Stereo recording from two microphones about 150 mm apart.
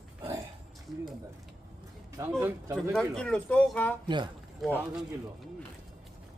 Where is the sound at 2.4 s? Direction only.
20° right (ahead or behind).